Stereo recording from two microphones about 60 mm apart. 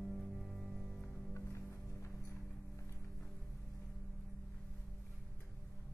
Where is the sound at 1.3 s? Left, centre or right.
Left.